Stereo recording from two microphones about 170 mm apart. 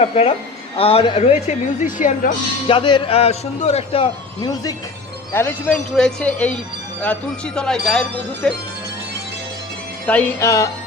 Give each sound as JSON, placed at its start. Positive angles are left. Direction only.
{"t": 0.0, "sound": "a man's voice", "side_deg": 40}
{"t": 2.6, "sound": "a man's voice", "side_deg": 30}
{"t": 4.4, "sound": "speech", "side_deg": 20}
{"t": 10.1, "sound": "speech", "side_deg": 10}